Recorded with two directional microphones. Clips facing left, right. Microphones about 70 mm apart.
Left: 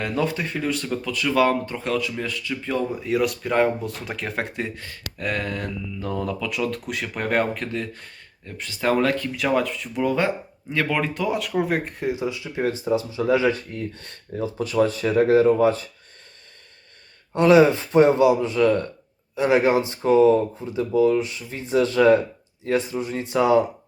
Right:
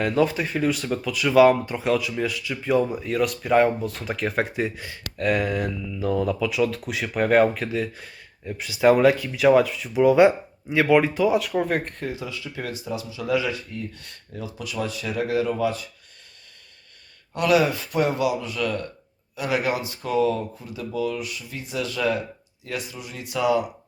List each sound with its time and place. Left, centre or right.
0.0 s speech: centre
12.0 s speech: left
17.3 s speech: left